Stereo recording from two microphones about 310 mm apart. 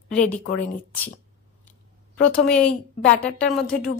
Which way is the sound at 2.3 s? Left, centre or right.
Centre.